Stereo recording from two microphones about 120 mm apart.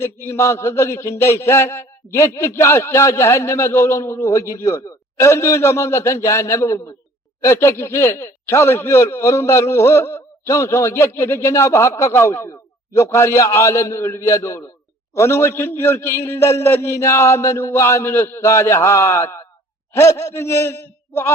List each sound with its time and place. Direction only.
0.0 s speech: 20° left (ahead or behind)